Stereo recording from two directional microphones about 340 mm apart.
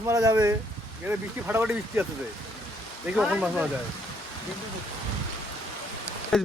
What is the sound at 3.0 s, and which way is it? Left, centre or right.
Speech, centre.